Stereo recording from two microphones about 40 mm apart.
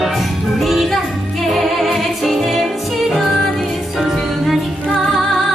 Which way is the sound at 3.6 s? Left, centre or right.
Centre.